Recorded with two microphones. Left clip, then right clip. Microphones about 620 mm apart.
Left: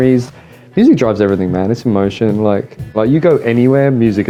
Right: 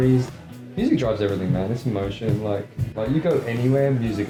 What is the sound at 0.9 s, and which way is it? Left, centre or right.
Speech, left.